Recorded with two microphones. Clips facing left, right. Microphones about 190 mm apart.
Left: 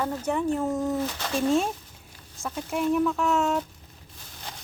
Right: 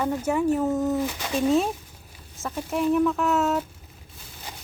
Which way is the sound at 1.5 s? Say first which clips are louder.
Right 2 dB; centre (ahead or behind).